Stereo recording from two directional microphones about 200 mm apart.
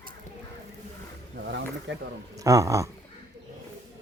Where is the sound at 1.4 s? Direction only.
60° right (ahead or behind).